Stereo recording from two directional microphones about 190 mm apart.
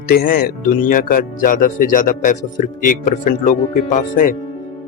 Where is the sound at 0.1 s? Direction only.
55° left (ahead or behind).